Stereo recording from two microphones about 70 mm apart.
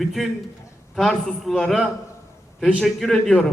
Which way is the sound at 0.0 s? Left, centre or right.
Centre.